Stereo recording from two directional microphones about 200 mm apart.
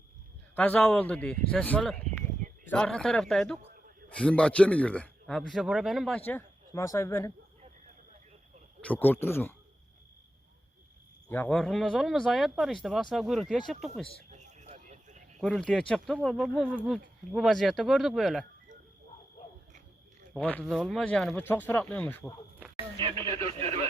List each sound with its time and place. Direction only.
0.5 s a man's voice: 5° left (ahead or behind)
8.8 s speech: 10° left (ahead or behind)
11.3 s a man's voice: 10° left (ahead or behind)
14.3 s a sound: 35° right (ahead or behind)
15.4 s a man's voice: 5° left (ahead or behind)
20.3 s speech: 5° left (ahead or behind)
23.0 s speech: 25° right (ahead or behind)